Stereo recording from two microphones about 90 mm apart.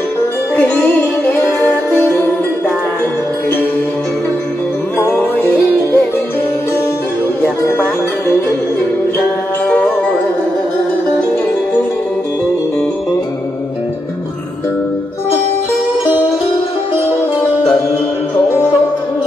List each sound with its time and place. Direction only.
2.0 s music: 20° left (ahead or behind)
4.9 s music: 25° left (ahead or behind)